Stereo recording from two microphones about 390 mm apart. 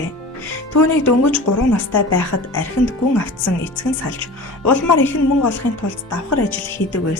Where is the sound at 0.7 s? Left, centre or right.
Left.